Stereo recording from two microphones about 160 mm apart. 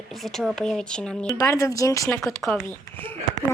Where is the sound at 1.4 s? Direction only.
20° left (ahead or behind).